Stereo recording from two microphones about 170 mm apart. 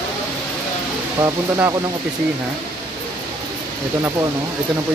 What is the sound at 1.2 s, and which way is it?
Speech, 15° right (ahead or behind).